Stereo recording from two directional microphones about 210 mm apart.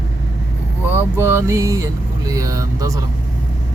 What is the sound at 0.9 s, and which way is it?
Speech, 10° right (ahead or behind).